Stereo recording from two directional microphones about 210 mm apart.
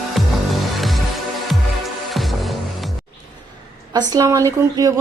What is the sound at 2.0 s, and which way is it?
Music, centre (ahead or behind).